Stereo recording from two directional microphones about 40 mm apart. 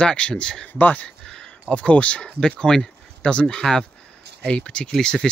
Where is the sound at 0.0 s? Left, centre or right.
Left.